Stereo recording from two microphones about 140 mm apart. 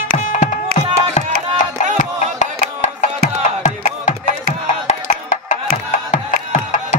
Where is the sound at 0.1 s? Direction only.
55° left (ahead or behind).